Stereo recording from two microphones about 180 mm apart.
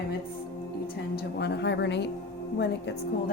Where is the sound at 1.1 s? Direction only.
70° left (ahead or behind).